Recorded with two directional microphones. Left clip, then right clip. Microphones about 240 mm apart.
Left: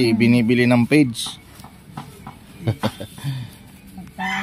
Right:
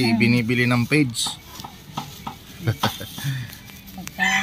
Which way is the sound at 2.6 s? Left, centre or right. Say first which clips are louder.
Right 1 dB; centre.